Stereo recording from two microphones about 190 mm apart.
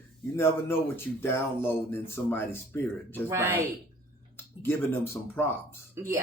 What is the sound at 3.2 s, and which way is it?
Speech, 10° right (ahead or behind).